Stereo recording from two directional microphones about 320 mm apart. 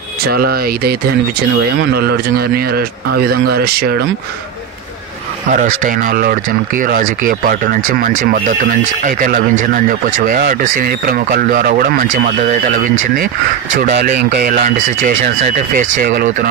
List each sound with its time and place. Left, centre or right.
0.3 s speech: right
5.5 s speech: right
13.7 s speech: right